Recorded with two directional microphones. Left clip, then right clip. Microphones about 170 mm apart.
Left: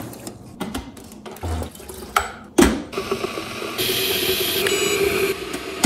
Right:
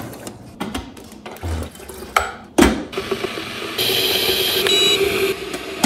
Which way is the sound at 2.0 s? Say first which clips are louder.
Right 3 dB; centre (ahead or behind).